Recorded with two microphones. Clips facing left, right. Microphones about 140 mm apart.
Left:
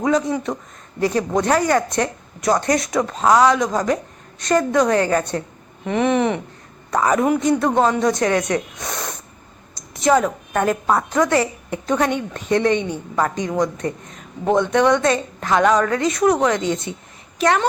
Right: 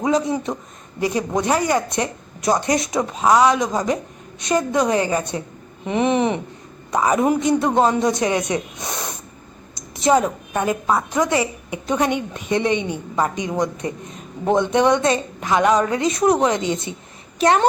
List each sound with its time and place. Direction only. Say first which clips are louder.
0.0 s a woman's voice: left 1 dB; 20° right (ahead or behind)
3.1 s a woman's voice: even; 5° right (ahead or behind)
10.6 s a woman's voice: left 2 dB; 5° right (ahead or behind); by 17.7 s 30° right (ahead or behind)